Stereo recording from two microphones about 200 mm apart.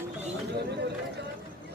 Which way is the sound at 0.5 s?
55° right (ahead or behind).